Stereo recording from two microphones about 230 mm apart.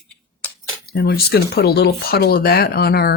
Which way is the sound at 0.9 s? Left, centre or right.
Left.